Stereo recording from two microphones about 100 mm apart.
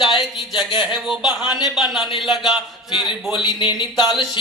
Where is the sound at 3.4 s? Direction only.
50° left (ahead or behind).